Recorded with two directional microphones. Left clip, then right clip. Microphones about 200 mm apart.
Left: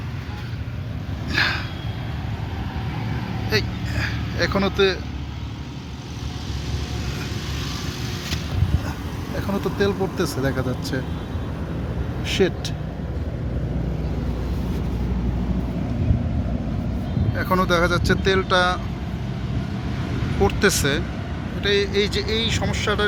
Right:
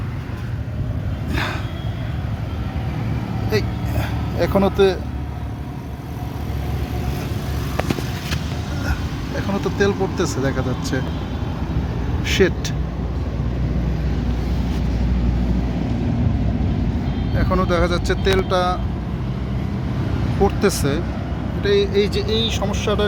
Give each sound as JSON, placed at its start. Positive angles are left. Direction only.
{"t": 1.3, "sound": "vehicle", "side_deg": -10}
{"t": 3.5, "sound": "speech", "side_deg": -10}
{"t": 9.5, "sound": "speech", "side_deg": 5}
{"t": 12.2, "sound": "speech", "side_deg": 0}
{"t": 17.3, "sound": "speech", "side_deg": 0}
{"t": 20.4, "sound": "speech", "side_deg": -5}